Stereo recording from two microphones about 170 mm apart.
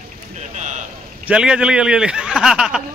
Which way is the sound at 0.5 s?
45° right (ahead or behind).